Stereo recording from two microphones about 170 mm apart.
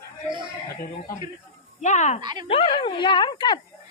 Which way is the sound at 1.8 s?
45° left (ahead or behind).